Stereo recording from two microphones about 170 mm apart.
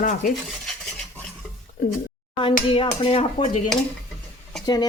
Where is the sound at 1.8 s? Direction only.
65° left (ahead or behind).